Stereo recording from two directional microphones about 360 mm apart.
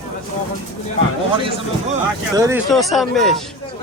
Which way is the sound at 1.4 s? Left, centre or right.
Centre.